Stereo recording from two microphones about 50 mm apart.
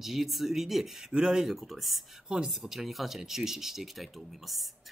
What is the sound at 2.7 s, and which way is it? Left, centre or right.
Speech, centre.